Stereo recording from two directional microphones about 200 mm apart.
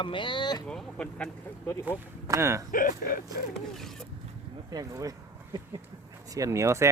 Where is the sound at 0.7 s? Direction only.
5° left (ahead or behind).